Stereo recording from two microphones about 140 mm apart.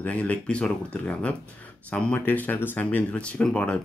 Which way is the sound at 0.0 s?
10° left (ahead or behind).